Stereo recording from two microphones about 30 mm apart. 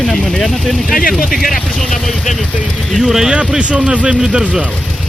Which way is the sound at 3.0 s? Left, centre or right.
Centre.